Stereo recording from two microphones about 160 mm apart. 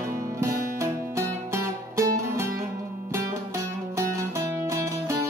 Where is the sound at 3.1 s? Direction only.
20° right (ahead or behind).